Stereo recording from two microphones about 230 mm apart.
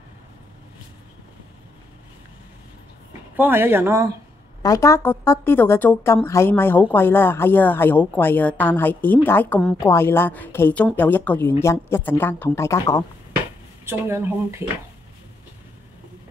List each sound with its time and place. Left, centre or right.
3.1 s speech: centre
4.6 s speech: centre
13.8 s speech: centre